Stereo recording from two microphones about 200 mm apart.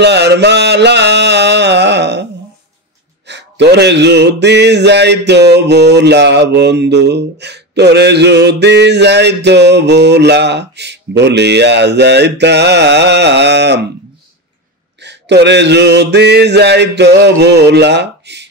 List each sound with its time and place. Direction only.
0.0 s mantra: 60° right (ahead or behind)
3.3 s mantra: 60° right (ahead or behind)
15.0 s mantra: 60° right (ahead or behind)